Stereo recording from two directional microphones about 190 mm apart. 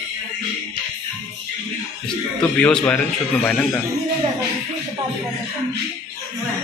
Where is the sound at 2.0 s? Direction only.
10° left (ahead or behind).